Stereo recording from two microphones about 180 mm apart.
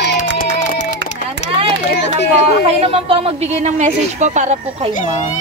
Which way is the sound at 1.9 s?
70° left (ahead or behind).